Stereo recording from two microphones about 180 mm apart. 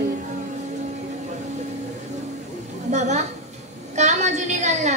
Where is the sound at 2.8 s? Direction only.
40° right (ahead or behind).